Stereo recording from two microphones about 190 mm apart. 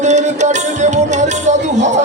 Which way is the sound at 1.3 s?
40° right (ahead or behind).